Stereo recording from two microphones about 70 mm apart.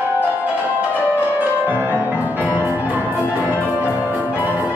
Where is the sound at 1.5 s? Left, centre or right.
Right.